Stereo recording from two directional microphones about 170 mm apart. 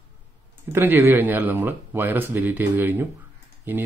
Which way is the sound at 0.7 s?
10° right (ahead or behind).